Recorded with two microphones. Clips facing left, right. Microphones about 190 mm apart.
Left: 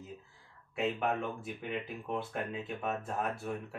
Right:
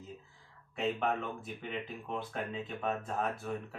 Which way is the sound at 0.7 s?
Centre (ahead or behind).